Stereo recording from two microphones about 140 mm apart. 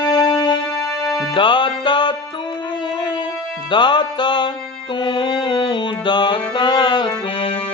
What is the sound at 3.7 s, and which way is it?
Music, 35° left (ahead or behind).